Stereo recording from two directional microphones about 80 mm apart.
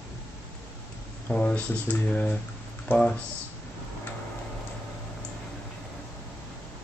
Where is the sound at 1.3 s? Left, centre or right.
Centre.